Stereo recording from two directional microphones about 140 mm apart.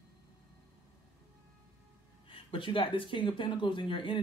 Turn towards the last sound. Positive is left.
turn(degrees=35)  # may be behind; listen again after turning